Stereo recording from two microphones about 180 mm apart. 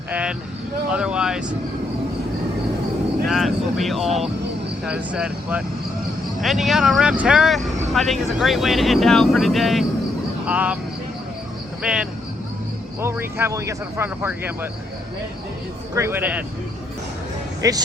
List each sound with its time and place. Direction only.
0.1 s vehicle: 5° right (ahead or behind)
0.9 s speech: 5° right (ahead or behind)
3.2 s speech: centre (ahead or behind)
11.8 s speech: 5° right (ahead or behind)
16.0 s speech: 10° right (ahead or behind)
17.6 s speech: 20° right (ahead or behind)